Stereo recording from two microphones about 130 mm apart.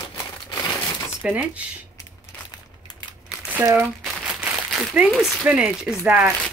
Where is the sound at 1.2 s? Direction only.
10° right (ahead or behind).